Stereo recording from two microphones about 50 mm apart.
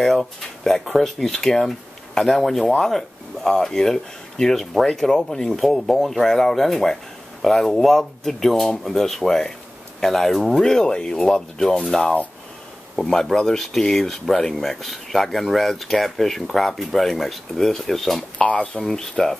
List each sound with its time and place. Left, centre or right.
0.0 s speech: centre
18.4 s speech: left
18.8 s speech: centre